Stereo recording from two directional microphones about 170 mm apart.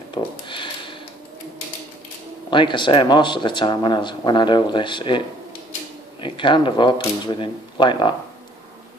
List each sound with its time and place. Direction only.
0.1 s speech: 30° left (ahead or behind)
2.5 s speech: 30° left (ahead or behind)
6.2 s speech: 30° left (ahead or behind)